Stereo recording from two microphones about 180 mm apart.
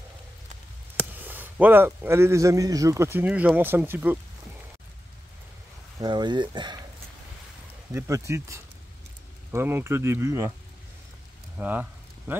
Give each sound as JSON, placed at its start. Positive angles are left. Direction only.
{"t": 1.1, "sound": "speech", "side_deg": -10}
{"t": 5.9, "sound": "speech", "side_deg": -25}
{"t": 7.9, "sound": "speech", "side_deg": -15}
{"t": 11.5, "sound": "a sound", "side_deg": -10}